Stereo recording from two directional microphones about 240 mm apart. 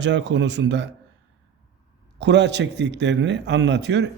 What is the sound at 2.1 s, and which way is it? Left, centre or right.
Speech, right.